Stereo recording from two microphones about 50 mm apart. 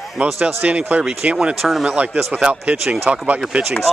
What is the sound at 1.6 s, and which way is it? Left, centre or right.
Speech, centre.